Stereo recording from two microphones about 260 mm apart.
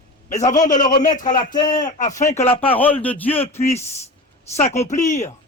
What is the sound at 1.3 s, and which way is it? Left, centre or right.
Speech, centre.